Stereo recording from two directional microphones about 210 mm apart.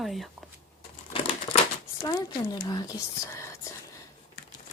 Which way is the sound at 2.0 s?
20° left (ahead or behind).